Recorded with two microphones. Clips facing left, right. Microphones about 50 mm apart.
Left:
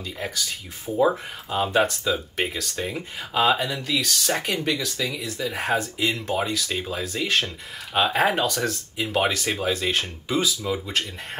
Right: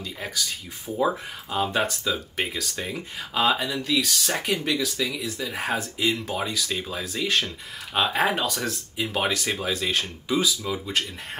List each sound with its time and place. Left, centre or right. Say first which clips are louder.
0.2 s speech: left 1 dB; centre